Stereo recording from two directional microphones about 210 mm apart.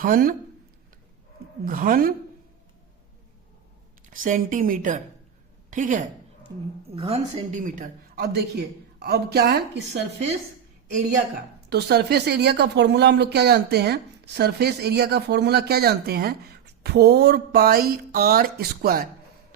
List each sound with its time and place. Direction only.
0.0 s speech: 40° right (ahead or behind)
1.6 s a woman's voice: 40° right (ahead or behind)
4.1 s a woman's voice: 40° right (ahead or behind)
6.5 s a woman's voice: 15° right (ahead or behind)
6.9 s speech: 30° right (ahead or behind); by 10.0 s 50° right (ahead or behind)
11.7 s speech: 50° right (ahead or behind)